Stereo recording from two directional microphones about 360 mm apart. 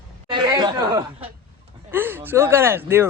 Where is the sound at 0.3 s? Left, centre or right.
Centre.